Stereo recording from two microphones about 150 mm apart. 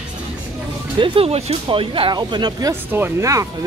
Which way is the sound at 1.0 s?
40° right (ahead or behind).